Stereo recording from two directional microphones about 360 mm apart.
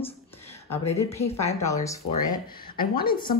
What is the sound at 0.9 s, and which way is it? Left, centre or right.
Speech, centre.